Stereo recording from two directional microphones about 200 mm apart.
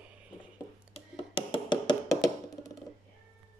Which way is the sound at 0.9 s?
30° left (ahead or behind).